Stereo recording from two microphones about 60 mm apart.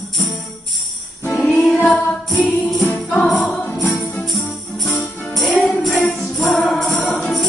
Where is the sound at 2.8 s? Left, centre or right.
Left.